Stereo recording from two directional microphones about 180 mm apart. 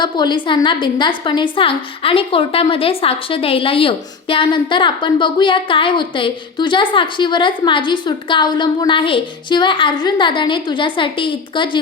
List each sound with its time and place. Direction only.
0.0 s a woman's voice: 25° left (ahead or behind)